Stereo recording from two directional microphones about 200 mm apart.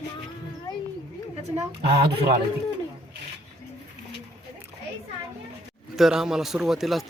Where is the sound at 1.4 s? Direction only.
35° right (ahead or behind).